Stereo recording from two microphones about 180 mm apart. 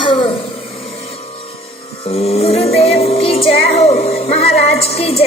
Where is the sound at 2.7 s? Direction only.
35° left (ahead or behind).